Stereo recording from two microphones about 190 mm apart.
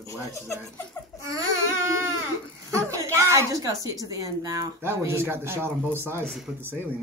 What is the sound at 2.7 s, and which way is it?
A woman's voice, 15° right (ahead or behind).